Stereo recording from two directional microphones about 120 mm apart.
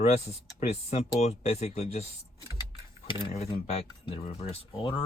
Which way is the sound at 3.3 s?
60° left (ahead or behind).